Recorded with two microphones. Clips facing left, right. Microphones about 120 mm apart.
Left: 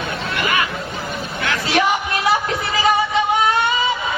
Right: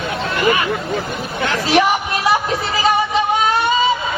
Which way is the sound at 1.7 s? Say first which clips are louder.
Right 3 dB; 20° right (ahead or behind).